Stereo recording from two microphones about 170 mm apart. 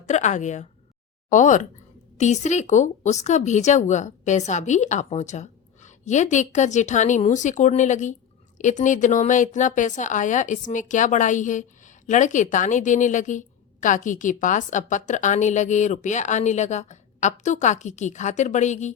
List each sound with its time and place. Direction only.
0.1 s a woman's voice: 45° left (ahead or behind)